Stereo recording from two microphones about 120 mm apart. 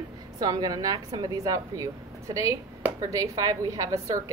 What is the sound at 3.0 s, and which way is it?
A woman's voice, 30° right (ahead or behind).